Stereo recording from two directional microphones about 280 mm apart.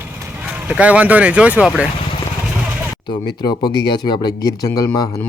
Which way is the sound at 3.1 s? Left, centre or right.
Centre.